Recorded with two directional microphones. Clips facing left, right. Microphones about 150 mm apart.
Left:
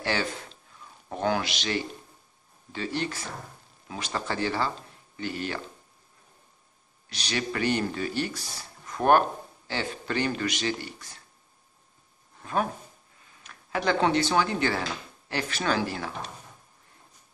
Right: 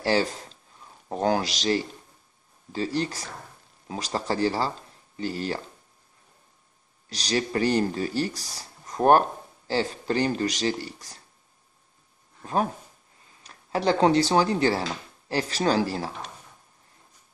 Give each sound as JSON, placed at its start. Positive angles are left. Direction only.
{"t": 0.0, "sound": "speech", "side_deg": -35}
{"t": 7.1, "sound": "speech", "side_deg": -35}
{"t": 13.4, "sound": "speech", "side_deg": -35}